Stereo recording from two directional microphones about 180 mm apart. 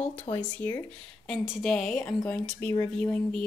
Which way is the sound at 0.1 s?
35° left (ahead or behind).